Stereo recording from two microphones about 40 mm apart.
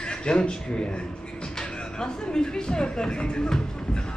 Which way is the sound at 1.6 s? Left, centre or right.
Centre.